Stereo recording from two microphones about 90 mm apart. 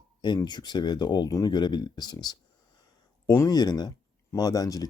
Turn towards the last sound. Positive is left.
turn(degrees=40)  # may be behind; listen again after turning